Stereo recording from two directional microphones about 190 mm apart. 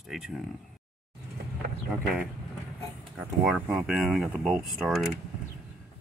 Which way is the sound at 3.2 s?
5° right (ahead or behind).